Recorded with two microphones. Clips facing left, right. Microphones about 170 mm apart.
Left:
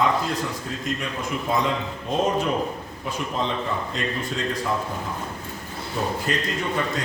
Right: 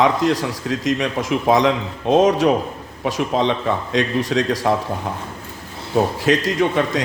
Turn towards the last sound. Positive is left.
turn(degrees=-90)